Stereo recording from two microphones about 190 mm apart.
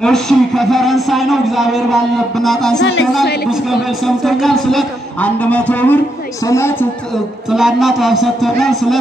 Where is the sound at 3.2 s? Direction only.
60° left (ahead or behind).